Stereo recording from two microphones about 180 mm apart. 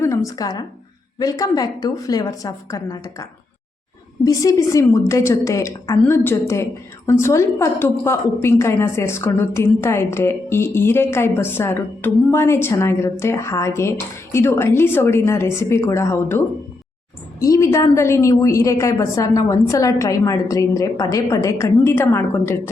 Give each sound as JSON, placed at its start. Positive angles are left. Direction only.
{"t": 0.0, "sound": "a woman's voice", "side_deg": 15}
{"t": 4.3, "sound": "a woman's voice", "side_deg": 20}
{"t": 17.4, "sound": "a woman's voice", "side_deg": 15}